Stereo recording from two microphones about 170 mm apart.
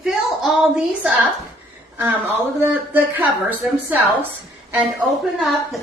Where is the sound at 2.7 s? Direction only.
10° right (ahead or behind).